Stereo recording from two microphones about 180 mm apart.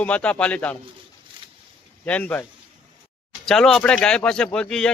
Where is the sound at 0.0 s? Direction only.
5° left (ahead or behind).